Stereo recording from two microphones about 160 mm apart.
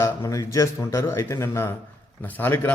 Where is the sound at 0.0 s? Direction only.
20° left (ahead or behind).